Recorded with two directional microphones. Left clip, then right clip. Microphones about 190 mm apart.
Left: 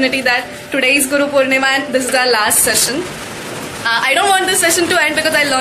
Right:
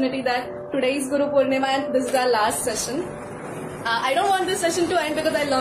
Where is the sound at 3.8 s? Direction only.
Centre (ahead or behind).